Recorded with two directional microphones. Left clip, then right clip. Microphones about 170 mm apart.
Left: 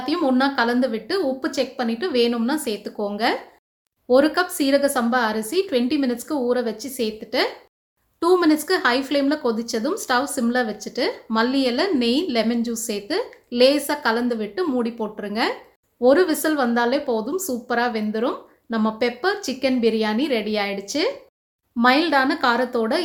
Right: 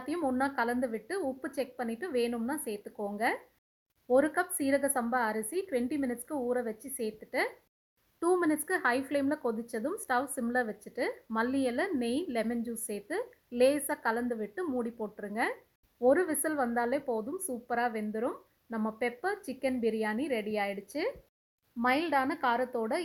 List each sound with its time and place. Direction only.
0.0 s a woman's voice: 30° right (ahead or behind)